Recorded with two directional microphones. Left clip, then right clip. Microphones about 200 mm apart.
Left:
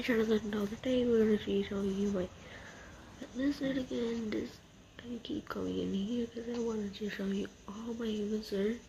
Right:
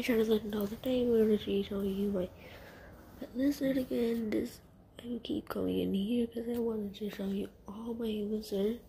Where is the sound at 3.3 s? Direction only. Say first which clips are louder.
Right 3 dB; 15° right (ahead or behind).